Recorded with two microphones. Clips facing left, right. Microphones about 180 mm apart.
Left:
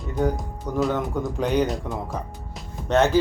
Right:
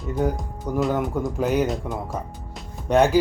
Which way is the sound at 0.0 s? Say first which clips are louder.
Even; 5° right (ahead or behind).